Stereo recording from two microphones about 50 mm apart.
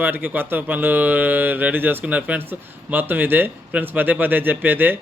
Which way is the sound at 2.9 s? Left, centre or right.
Right.